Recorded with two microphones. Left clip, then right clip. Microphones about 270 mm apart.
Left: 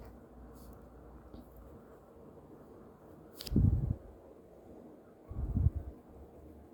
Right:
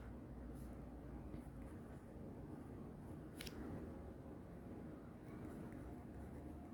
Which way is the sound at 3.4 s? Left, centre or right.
Centre.